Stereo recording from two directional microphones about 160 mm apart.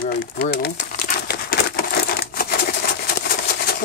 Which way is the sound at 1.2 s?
80° left.